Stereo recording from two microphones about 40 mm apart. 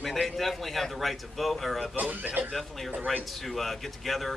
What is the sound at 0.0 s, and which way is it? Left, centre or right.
A man's voice, centre.